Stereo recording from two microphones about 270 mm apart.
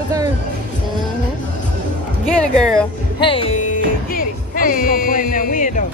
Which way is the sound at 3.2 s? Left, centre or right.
Centre.